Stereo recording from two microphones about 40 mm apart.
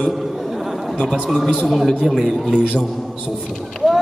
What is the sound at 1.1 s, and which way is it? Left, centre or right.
A man's voice, centre.